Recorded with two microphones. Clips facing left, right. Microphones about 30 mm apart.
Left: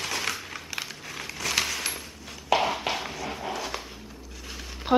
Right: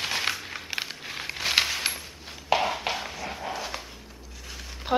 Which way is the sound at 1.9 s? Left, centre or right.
Centre.